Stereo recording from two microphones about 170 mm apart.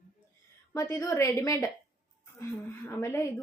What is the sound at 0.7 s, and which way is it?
Speech, 20° left (ahead or behind).